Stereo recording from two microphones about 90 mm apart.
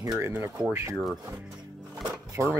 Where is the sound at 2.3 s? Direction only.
35° right (ahead or behind).